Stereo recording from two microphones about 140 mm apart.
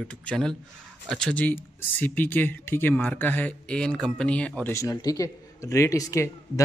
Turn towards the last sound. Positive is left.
turn(degrees=20)  # may be behind; listen again after turning